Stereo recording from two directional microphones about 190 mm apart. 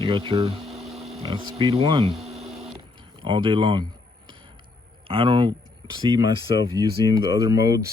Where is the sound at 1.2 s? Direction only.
30° right (ahead or behind).